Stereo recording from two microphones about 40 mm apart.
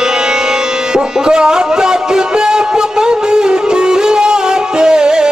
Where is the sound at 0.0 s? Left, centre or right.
Centre.